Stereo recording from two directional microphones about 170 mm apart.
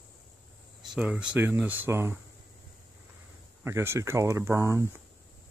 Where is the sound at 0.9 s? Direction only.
5° right (ahead or behind).